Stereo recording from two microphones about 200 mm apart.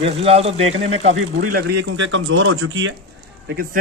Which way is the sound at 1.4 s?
50° right (ahead or behind).